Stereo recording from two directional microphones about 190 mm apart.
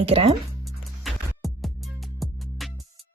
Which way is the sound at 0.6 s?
Centre (ahead or behind).